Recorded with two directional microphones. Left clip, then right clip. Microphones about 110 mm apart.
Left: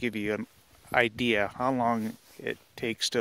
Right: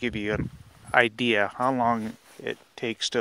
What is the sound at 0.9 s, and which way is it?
Speech, 10° left (ahead or behind).